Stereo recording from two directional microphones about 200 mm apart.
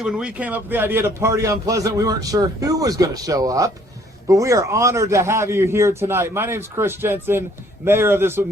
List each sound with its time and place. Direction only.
0.0 s a man's voice: 5° right (ahead or behind)